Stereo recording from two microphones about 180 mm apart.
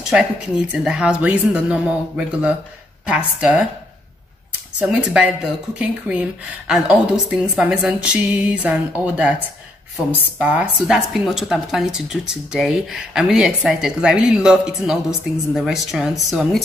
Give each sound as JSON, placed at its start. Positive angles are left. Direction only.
{"t": 0.0, "sound": "a woman's voice", "side_deg": -5}
{"t": 4.7, "sound": "a woman's voice", "side_deg": -5}